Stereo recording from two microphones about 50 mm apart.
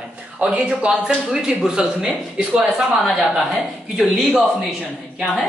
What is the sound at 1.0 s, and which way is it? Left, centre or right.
Speech, centre.